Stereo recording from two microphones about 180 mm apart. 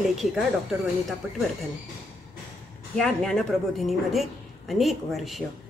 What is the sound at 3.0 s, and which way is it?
Speech, centre (ahead or behind).